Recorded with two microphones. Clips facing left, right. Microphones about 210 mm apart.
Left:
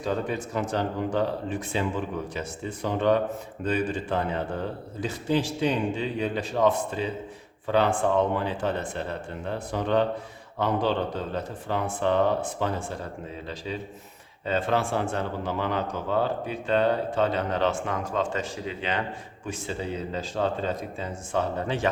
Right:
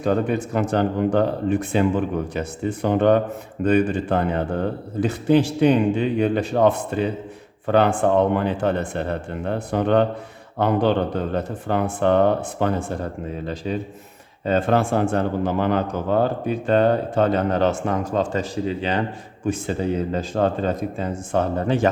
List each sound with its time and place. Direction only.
0.0 s speech: 60° right (ahead or behind); by 19.0 s 35° right (ahead or behind)
19.5 s speech: 50° right (ahead or behind)